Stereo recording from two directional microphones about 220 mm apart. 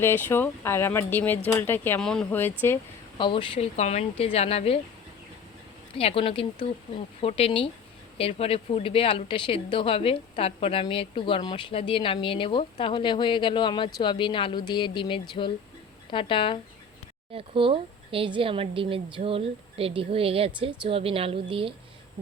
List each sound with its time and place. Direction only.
0.0 s speech: 10° left (ahead or behind)
3.2 s speech: 20° left (ahead or behind)
6.0 s speech: 25° left (ahead or behind)
17.3 s speech: 25° right (ahead or behind)